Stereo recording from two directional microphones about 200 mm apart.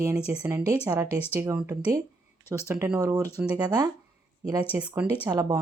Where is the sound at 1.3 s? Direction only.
15° right (ahead or behind).